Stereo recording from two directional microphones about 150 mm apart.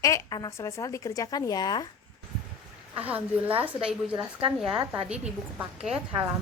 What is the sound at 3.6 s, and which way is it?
A woman's voice, 10° right (ahead or behind).